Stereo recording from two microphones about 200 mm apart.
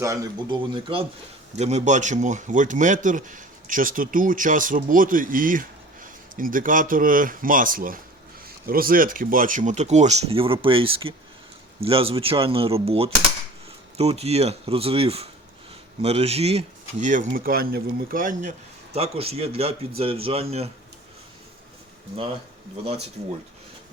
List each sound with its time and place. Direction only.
0.0 s speech: 15° right (ahead or behind); by 18.5 s 45° right (ahead or behind)
18.9 s speech: 30° right (ahead or behind)